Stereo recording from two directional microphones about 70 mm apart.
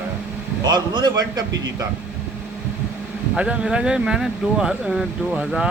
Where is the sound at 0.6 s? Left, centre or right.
Right.